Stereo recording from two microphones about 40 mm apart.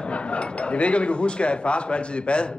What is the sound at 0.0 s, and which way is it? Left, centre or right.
A man's voice, left.